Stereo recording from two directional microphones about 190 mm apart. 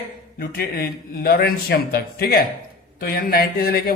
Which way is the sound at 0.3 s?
50° left (ahead or behind).